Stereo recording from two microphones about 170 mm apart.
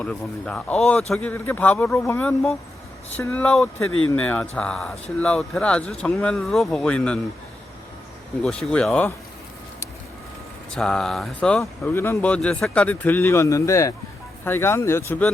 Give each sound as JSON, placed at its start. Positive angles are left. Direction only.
{"t": 0.0, "sound": "speech", "side_deg": 5}
{"t": 8.4, "sound": "speech", "side_deg": 5}
{"t": 10.7, "sound": "speech", "side_deg": 5}